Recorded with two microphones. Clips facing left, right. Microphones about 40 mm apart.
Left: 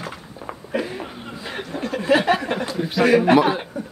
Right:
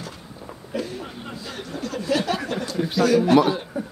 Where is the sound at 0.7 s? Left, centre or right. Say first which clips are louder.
Left 3 dB; left.